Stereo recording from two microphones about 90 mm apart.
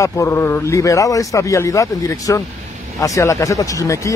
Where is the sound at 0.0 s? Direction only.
35° left (ahead or behind).